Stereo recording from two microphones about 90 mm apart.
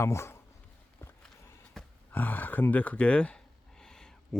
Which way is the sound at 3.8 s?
5° left (ahead or behind).